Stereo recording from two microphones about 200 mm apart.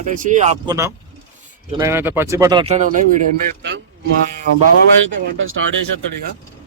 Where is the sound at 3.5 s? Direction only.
60° right (ahead or behind).